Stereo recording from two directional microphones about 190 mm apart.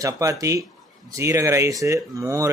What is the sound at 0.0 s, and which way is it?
Speech, 15° right (ahead or behind).